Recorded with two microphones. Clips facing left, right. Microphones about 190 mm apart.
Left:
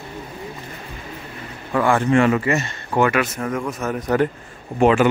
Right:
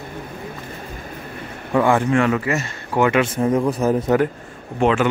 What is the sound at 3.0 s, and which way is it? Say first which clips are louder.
Speech: right 2 dB; 20° right (ahead or behind).